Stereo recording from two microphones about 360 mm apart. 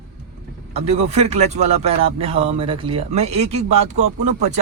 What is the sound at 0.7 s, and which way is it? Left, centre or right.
Speech, centre.